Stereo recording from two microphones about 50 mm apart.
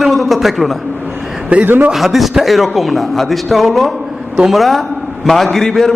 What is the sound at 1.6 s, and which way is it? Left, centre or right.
Speech, right.